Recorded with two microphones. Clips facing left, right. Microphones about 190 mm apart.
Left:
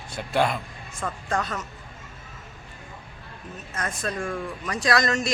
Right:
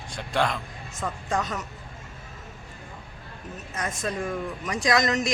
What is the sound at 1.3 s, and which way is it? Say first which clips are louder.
Speech: even; 15° right (ahead or behind).